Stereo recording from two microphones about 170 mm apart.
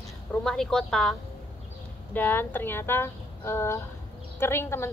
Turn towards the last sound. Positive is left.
turn(degrees=15)  # may be behind; listen again after turning